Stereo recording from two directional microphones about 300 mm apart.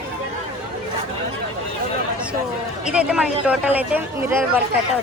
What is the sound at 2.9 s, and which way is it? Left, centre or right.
A woman's voice, centre.